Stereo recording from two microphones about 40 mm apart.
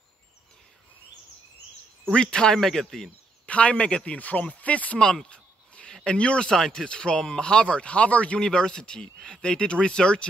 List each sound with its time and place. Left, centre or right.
2.1 s speech: centre
2.6 s speech: centre
3.4 s speech: left
5.2 s a sound: left
6.0 s speech: left
8.4 s speech: centre